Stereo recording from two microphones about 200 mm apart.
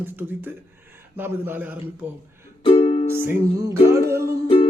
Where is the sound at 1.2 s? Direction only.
10° right (ahead or behind).